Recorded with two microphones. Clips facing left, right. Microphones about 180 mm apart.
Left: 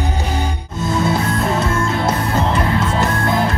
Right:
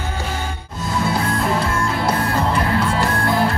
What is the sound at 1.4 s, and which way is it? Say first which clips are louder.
Music: left 2 dB; 25° left (ahead or behind).